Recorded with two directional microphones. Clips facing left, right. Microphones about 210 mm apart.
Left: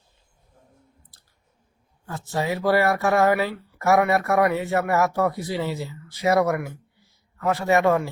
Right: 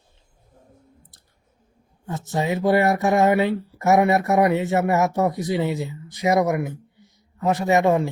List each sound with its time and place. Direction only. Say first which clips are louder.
2.0 s speech: right 2 dB; 20° right (ahead or behind)